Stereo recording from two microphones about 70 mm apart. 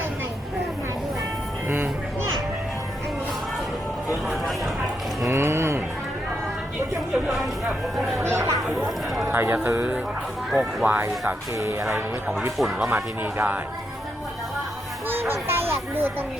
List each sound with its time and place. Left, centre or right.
4.1 s music: centre
5.2 s a sound: right
7.1 s speech: centre
8.2 s speech: right
10.5 s speech: centre
11.5 s speech: right
12.5 s speech: centre
12.9 s speech: right
15.0 s a child's voice: right